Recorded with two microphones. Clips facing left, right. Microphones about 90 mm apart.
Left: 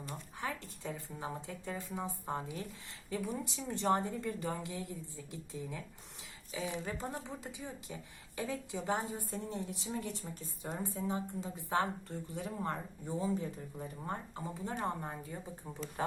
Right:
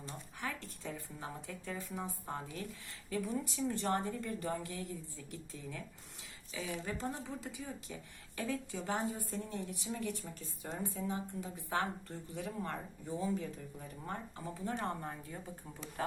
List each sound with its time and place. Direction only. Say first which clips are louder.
0.1 s a woman's voice: left 2 dB; 20° left (ahead or behind)
14.6 s a woman's voice: even; 15° left (ahead or behind)